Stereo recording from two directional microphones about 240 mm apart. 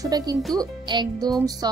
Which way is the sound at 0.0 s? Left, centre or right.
Centre.